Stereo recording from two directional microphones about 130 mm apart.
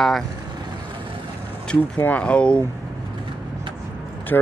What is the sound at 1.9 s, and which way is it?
Speech, 10° left (ahead or behind).